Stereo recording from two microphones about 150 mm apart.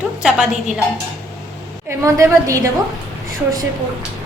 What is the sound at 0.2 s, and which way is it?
Speech, 5° right (ahead or behind).